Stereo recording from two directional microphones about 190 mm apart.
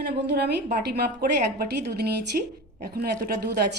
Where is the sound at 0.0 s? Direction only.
60° right (ahead or behind).